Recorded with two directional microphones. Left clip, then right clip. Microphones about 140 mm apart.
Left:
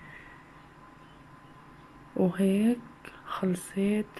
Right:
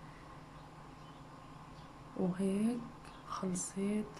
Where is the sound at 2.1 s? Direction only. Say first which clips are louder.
Left 10 dB; 20° left (ahead or behind).